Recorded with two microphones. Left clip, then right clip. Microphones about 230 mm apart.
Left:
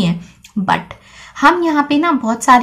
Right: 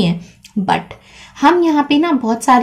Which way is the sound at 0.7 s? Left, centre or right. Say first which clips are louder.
Even; centre.